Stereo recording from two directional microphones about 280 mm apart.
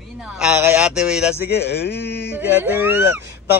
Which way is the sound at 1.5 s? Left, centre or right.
Left.